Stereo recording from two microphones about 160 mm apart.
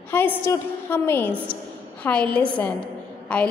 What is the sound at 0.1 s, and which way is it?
A woman's voice, 10° left (ahead or behind).